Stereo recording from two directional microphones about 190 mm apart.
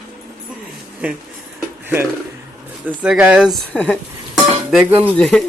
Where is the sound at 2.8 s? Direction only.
10° right (ahead or behind).